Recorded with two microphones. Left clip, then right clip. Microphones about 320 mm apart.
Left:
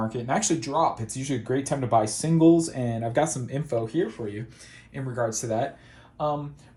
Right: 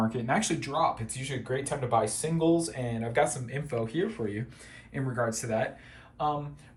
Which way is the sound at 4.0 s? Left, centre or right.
Centre.